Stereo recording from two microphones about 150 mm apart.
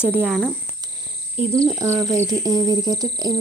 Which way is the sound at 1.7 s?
20° right (ahead or behind).